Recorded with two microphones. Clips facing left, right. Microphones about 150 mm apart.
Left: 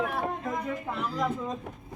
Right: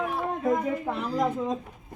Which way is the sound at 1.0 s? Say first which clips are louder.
Right 3 dB; 45° right (ahead or behind).